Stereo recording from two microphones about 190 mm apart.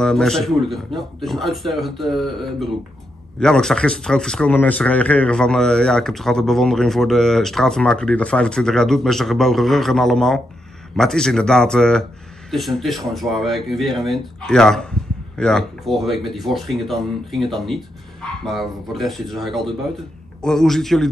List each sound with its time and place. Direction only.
0.0 s speech: 5° left (ahead or behind)